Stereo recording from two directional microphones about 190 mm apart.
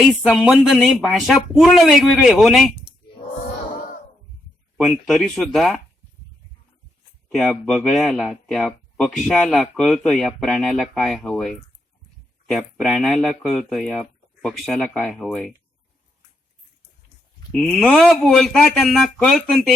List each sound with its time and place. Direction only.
0.0 s speech: centre (ahead or behind)
3.8 s a sound: 45° left (ahead or behind)
4.9 s speech: centre (ahead or behind)
7.3 s speech: centre (ahead or behind)
17.5 s speech: centre (ahead or behind)